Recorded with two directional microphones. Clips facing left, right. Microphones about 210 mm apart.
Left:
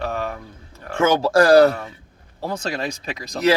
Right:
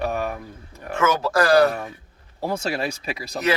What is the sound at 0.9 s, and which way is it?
Speech, 30° left (ahead or behind).